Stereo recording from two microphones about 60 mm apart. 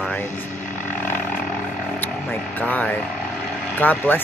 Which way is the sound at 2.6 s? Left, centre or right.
Left.